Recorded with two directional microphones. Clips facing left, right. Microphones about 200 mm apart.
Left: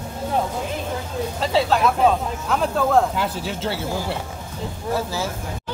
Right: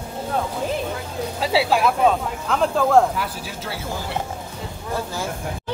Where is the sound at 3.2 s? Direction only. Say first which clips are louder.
Left 4 dB; 25° left (ahead or behind).